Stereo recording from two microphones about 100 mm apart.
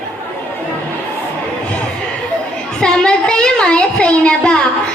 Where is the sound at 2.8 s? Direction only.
10° left (ahead or behind).